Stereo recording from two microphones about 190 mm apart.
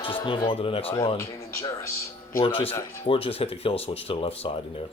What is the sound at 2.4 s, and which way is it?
Speech, 30° left (ahead or behind).